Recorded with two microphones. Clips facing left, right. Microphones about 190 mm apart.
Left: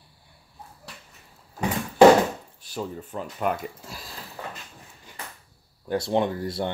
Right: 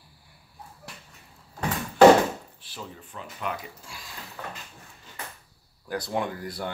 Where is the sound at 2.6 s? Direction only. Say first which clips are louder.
Left 9 dB; 45° left (ahead or behind).